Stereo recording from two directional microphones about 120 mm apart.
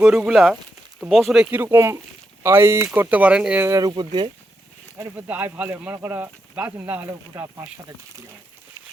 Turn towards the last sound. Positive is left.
turn(degrees=-25)  # may be behind; listen again after turning